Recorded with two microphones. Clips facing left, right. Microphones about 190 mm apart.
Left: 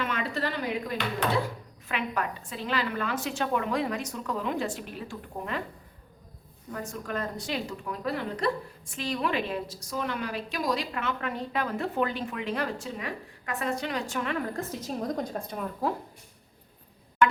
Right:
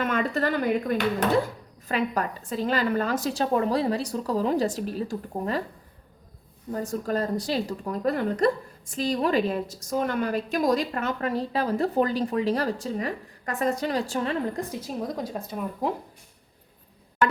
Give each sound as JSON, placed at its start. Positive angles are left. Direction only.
{"t": 0.0, "sound": "speech", "side_deg": -45}
{"t": 1.9, "sound": "a woman's voice", "side_deg": -40}
{"t": 6.7, "sound": "a woman's voice", "side_deg": -35}
{"t": 14.5, "sound": "a woman's voice", "side_deg": -10}